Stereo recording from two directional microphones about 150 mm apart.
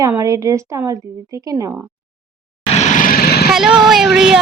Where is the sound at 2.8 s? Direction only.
65° left (ahead or behind); by 3.4 s 90° left.